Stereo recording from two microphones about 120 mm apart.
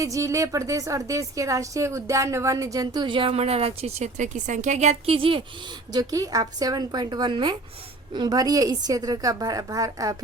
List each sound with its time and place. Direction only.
0.0 s a woman's voice: 25° right (ahead or behind); by 5.1 s 70° right (ahead or behind)
5.1 s speech: 50° right (ahead or behind)
5.9 s a woman's voice: 30° right (ahead or behind)